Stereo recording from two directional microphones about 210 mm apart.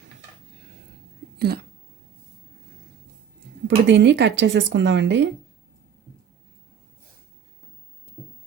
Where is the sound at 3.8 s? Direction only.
55° right (ahead or behind).